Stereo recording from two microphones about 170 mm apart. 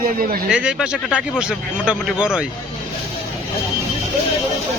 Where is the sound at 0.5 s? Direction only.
5° right (ahead or behind).